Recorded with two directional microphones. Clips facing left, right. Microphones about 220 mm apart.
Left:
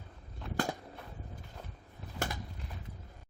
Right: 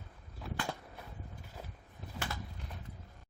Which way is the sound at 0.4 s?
Centre (ahead or behind).